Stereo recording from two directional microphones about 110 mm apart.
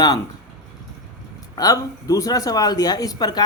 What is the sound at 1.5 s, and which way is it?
Speech, 35° left (ahead or behind).